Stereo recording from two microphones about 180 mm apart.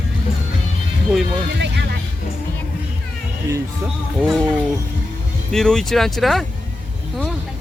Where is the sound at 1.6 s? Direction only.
70° right (ahead or behind).